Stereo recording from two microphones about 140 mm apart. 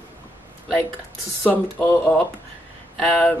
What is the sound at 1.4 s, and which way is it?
Speech, 15° left (ahead or behind).